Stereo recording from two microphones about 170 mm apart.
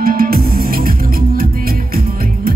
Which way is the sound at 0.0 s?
60° right (ahead or behind).